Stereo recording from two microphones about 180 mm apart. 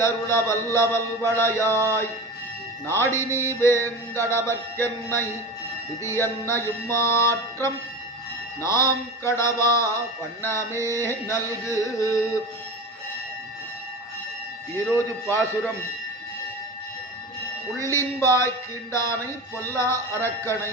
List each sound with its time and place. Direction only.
0.0 s mantra: 15° left (ahead or behind)
2.8 s mantra: 15° left (ahead or behind)
14.9 s mantra: 15° left (ahead or behind)
17.8 s mantra: 15° left (ahead or behind)